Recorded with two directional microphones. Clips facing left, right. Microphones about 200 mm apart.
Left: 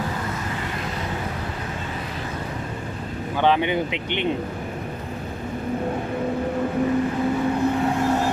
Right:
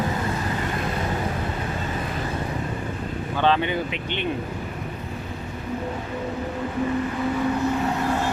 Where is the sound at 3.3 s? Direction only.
15° left (ahead or behind).